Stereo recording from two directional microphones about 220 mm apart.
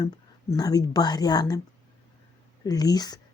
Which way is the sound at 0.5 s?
15° left (ahead or behind).